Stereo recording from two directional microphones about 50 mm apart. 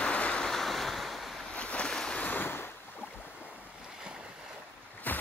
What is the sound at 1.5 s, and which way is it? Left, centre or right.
Boat, left.